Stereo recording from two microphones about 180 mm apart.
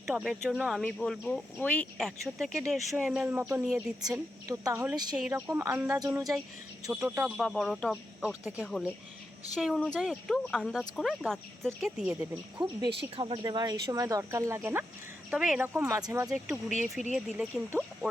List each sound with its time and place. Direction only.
0.1 s speech: centre (ahead or behind)
4.0 s a woman's voice: 20° right (ahead or behind)
6.1 s speech: 5° right (ahead or behind)
13.1 s a woman's voice: 30° right (ahead or behind)
16.3 s speech: centre (ahead or behind)